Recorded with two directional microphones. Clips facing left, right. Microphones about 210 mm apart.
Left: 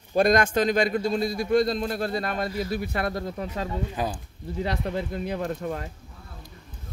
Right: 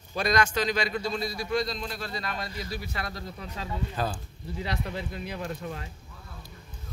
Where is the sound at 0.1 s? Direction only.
50° left (ahead or behind).